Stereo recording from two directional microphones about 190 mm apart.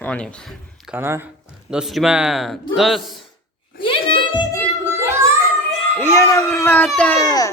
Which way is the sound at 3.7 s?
25° left (ahead or behind).